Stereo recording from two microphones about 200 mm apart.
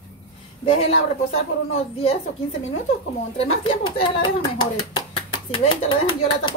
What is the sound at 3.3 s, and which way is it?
Speech, 25° left (ahead or behind).